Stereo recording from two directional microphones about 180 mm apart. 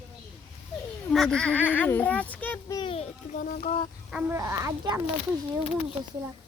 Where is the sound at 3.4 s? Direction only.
45° left (ahead or behind).